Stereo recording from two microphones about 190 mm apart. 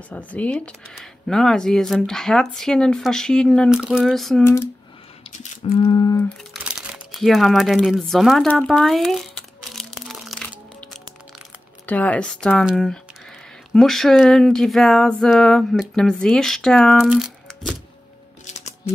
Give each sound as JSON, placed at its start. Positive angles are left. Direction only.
{"t": 0.1, "sound": "speech", "side_deg": 5}
{"t": 5.4, "sound": "a sound", "side_deg": 30}
{"t": 6.2, "sound": "crumpling", "side_deg": 0}
{"t": 11.8, "sound": "speech", "side_deg": 10}